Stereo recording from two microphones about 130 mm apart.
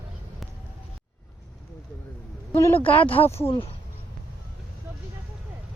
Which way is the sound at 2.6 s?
20° left (ahead or behind).